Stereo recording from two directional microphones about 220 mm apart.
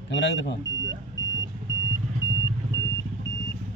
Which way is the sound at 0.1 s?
55° left (ahead or behind).